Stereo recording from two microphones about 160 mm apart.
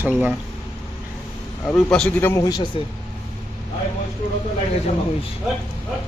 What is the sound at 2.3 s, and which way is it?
Speech, 25° left (ahead or behind).